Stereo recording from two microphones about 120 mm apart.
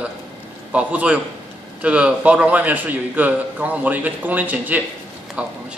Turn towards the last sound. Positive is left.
turn(degrees=-10)  # may be behind; listen again after turning